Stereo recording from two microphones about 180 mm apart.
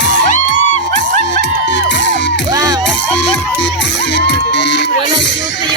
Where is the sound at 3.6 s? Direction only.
75° left (ahead or behind).